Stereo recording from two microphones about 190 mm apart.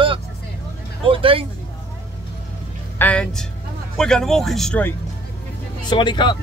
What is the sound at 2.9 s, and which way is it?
Speech, 5° left (ahead or behind).